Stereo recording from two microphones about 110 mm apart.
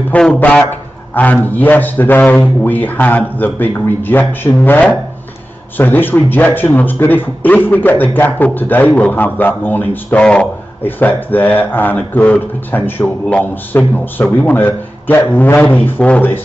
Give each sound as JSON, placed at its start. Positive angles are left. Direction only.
{"t": 0.1, "sound": "a man's voice", "side_deg": 5}